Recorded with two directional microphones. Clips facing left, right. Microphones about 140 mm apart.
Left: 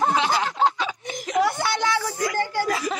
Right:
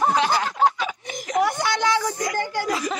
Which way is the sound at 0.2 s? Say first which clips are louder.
Right 1 dB; 25° left (ahead or behind).